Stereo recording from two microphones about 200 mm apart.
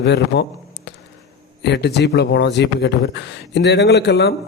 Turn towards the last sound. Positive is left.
turn(degrees=60)  # may be behind; listen again after turning